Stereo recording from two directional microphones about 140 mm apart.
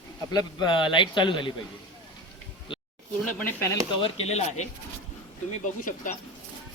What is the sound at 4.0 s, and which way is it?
Speech, 50° left (ahead or behind).